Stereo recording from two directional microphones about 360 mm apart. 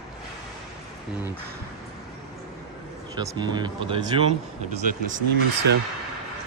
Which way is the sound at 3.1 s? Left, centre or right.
Centre.